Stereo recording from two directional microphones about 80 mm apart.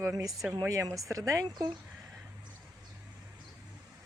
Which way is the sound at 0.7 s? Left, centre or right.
Right.